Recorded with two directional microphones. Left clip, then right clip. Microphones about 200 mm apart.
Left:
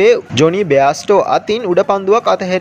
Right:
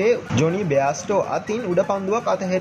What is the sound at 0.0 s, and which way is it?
Speech, 30° left (ahead or behind).